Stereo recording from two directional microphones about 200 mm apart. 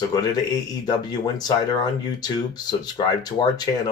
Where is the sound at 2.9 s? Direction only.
20° left (ahead or behind).